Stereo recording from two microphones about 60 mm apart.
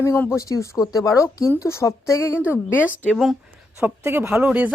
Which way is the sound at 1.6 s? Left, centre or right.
Left.